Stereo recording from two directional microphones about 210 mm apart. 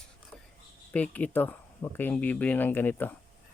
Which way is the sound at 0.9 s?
5° left (ahead or behind).